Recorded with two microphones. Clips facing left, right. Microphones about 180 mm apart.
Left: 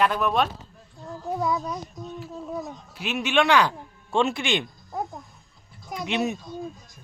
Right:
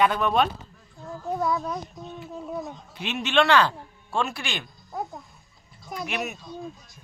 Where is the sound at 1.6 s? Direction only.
Centre (ahead or behind); by 4.6 s 20° left (ahead or behind).